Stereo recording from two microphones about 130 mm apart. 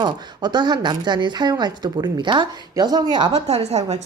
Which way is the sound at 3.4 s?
55° right (ahead or behind).